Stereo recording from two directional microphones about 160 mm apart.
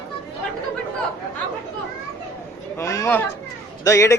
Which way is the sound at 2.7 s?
20° left (ahead or behind).